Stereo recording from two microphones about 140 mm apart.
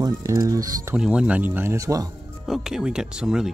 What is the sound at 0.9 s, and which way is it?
Speech, 5° right (ahead or behind).